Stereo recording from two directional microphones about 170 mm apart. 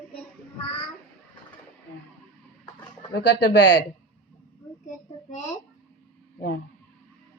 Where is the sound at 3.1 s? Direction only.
80° left.